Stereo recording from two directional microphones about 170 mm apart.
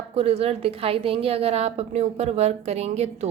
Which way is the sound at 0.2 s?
35° right (ahead or behind).